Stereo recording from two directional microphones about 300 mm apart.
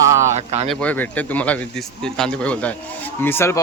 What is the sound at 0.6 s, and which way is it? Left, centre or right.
A man's voice, centre.